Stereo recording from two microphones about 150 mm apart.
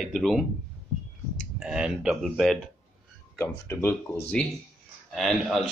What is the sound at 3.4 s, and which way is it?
Speech, 15° left (ahead or behind).